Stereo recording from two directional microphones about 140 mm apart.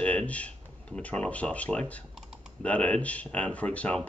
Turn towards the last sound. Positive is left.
turn(degrees=10)  # may be behind; listen again after turning